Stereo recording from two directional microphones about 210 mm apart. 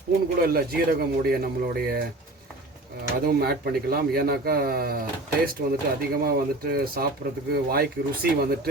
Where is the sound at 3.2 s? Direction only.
45° right (ahead or behind).